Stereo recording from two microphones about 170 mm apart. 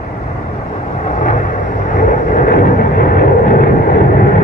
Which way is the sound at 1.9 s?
50° left (ahead or behind).